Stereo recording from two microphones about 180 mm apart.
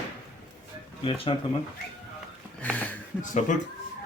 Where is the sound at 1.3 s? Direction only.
30° left (ahead or behind).